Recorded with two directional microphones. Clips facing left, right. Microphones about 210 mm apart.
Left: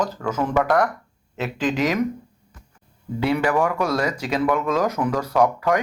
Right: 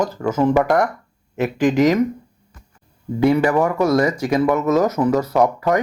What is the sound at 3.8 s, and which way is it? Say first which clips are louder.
Speech: right 6 dB; 10° right (ahead or behind).